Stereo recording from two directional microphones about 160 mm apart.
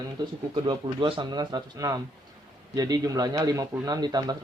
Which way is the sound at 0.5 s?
30° right (ahead or behind).